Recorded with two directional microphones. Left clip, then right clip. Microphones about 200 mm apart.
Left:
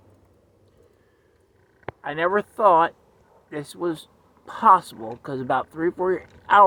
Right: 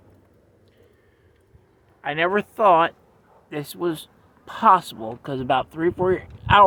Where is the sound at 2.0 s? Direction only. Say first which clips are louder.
Right 1 dB; 35° right (ahead or behind).